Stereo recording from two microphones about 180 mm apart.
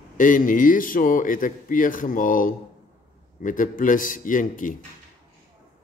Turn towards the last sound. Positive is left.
turn(degrees=45)  # may be behind; listen again after turning